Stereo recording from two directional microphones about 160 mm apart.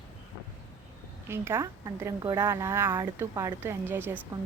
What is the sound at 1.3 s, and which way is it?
A woman's voice, 15° right (ahead or behind).